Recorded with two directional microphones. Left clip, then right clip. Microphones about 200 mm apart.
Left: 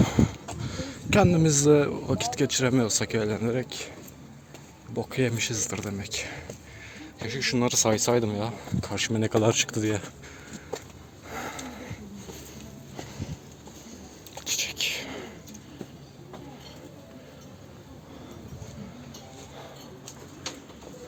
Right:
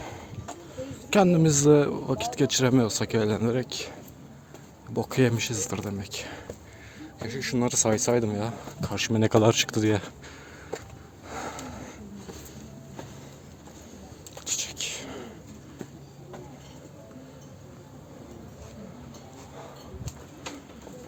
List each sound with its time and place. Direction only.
0.0 s a sound: 30° left (ahead or behind)
0.8 s a sound: 15° left (ahead or behind)
1.1 s speech: 10° right (ahead or behind)
4.9 s speech: 25° right (ahead or behind)
5.4 s speech: 15° right (ahead or behind)
7.0 s speech: centre (ahead or behind); by 10.1 s 20° right (ahead or behind)
11.3 s dog: 10° right (ahead or behind)
14.4 s whispering: centre (ahead or behind)